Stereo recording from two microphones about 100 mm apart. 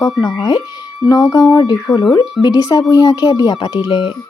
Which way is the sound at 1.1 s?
40° left (ahead or behind).